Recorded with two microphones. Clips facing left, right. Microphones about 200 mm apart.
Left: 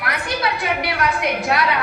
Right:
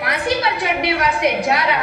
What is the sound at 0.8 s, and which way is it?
Speech, 20° right (ahead or behind).